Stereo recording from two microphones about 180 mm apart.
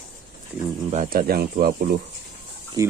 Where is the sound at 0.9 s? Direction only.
50° right (ahead or behind).